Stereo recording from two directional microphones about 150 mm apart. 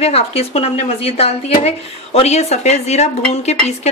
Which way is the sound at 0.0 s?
40° left (ahead or behind).